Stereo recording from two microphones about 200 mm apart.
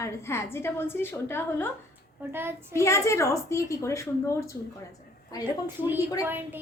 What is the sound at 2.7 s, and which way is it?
A woman's voice, 15° left (ahead or behind).